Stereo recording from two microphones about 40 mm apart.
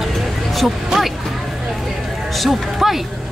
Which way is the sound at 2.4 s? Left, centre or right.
Centre.